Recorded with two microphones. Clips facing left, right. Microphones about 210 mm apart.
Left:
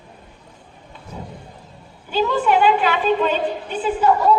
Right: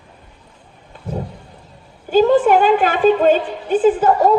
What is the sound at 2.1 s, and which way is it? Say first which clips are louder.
A woman's voice: right 7 dB; 45° right (ahead or behind).